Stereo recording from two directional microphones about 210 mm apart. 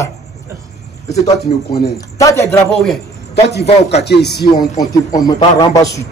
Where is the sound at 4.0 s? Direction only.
50° left (ahead or behind).